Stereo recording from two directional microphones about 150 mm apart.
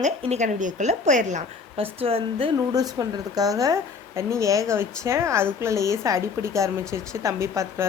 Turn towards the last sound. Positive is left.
turn(degrees=-20)  # may be behind; listen again after turning